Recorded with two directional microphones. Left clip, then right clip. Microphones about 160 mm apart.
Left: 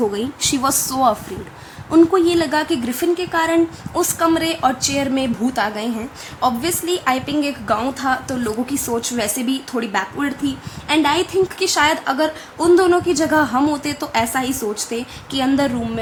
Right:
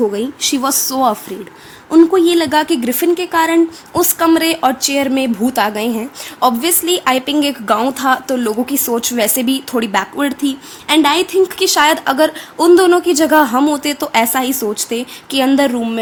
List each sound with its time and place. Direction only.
0.0 s a woman's voice: 20° right (ahead or behind)
1.9 s a woman's voice: 30° right (ahead or behind)
13.6 s a woman's voice: 35° right (ahead or behind)